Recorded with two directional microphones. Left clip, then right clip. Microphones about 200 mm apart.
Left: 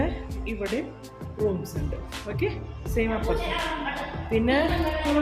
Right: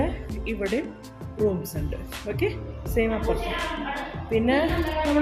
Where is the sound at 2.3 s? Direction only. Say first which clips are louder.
Right 2 dB; 15° right (ahead or behind).